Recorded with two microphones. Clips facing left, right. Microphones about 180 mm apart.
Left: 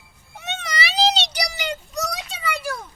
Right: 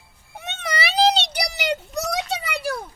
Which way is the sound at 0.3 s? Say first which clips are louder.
Right 1 dB; 55° right (ahead or behind).